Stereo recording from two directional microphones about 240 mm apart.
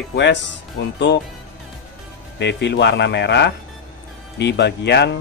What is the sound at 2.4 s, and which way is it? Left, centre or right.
Speech, left.